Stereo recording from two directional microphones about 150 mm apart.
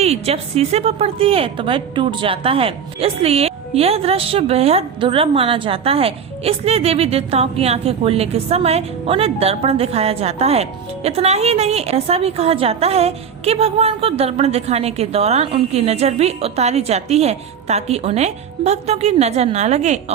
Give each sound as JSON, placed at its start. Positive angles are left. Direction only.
{"t": 0.0, "sound": "a woman's voice", "side_deg": -45}